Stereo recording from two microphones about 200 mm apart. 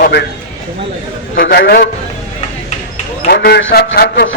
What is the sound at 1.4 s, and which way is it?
Speech, 60° left (ahead or behind).